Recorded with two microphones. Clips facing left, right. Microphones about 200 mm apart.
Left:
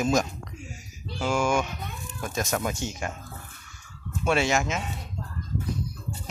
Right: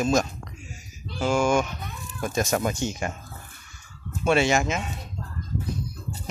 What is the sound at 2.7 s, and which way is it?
Speech, centre (ahead or behind).